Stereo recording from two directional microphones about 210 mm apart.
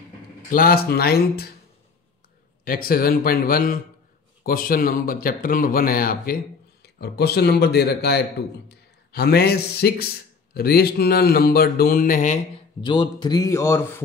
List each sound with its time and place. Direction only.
0.5 s a man's voice: 40° left (ahead or behind)
2.6 s a man's voice: 45° left (ahead or behind)
12.8 s speech: 20° left (ahead or behind)